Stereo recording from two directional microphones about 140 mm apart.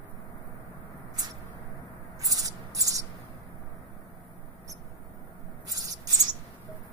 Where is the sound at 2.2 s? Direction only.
25° right (ahead or behind).